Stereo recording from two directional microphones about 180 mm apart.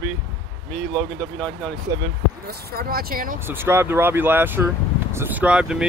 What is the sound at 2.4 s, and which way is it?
Speech, 55° right (ahead or behind).